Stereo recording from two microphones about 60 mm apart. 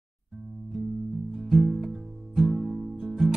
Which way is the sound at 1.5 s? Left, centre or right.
Centre.